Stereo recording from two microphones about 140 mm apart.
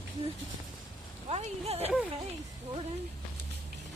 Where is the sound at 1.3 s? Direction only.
45° right (ahead or behind).